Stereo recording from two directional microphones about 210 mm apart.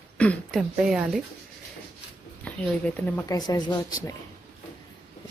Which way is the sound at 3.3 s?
20° left (ahead or behind).